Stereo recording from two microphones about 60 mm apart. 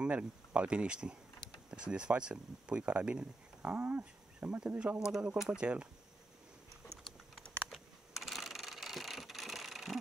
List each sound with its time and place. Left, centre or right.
0.0 s speech: right
5.0 s speech: centre
7.6 s a sound: centre